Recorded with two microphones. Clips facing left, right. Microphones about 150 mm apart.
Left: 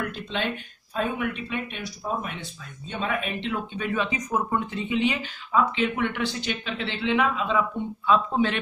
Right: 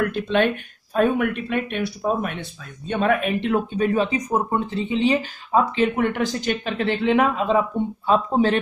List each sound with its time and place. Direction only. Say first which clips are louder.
0.1 s speech: right 9 dB; 60° right (ahead or behind); by 8.5 s 35° right (ahead or behind)